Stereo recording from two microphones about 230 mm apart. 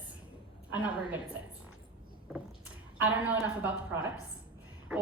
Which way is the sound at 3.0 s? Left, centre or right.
Centre.